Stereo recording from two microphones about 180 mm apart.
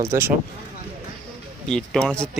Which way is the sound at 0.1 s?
15° right (ahead or behind).